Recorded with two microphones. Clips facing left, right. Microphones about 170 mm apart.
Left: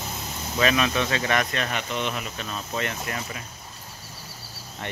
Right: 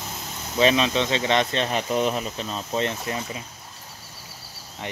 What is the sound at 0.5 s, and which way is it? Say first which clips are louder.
Speech: right 3 dB; 20° right (ahead or behind).